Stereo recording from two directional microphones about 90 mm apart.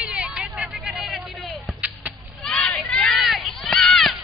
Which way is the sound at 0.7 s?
5° right (ahead or behind).